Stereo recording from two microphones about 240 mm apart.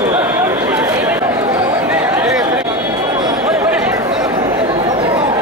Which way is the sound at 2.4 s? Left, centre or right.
Centre.